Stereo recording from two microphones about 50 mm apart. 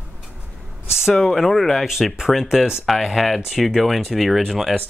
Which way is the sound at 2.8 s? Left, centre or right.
Centre.